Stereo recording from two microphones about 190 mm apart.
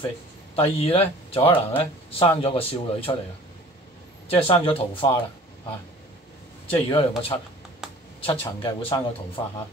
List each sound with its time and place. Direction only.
0.6 s speech: 30° left (ahead or behind)
4.3 s speech: 30° left (ahead or behind)
6.7 s speech: 30° left (ahead or behind)
7.8 s computer keyboard: 5° right (ahead or behind)
8.2 s speech: 30° left (ahead or behind)